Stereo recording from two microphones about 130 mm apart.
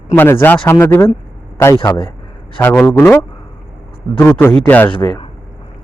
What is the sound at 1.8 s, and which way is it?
Speech, 35° left (ahead or behind).